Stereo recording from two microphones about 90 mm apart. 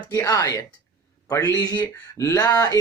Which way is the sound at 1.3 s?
40° left (ahead or behind).